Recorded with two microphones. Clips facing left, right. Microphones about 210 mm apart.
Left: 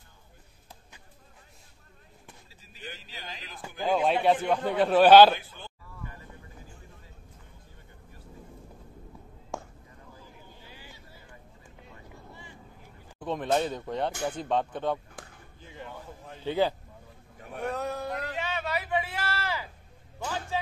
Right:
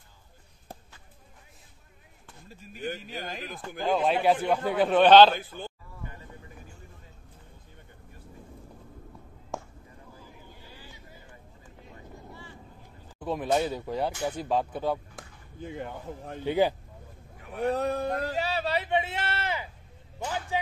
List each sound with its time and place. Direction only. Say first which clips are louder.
2.4 s speech: right 11 dB; 50° right (ahead or behind)
3.6 s a man's voice: even; centre (ahead or behind)
9.5 s a sound: right 1 dB; centre (ahead or behind)
10.6 s vehicle: right 1 dB; 15° left (ahead or behind)
13.2 s speech: right 1 dB; 5° right (ahead or behind)
15.6 s speech: right 7 dB; 55° right (ahead or behind)
16.4 s speech: right 2 dB; 15° right (ahead or behind)
17.6 s speech: right 5 dB; 35° right (ahead or behind)
18.2 s a sound: right 4 dB; 35° right (ahead or behind)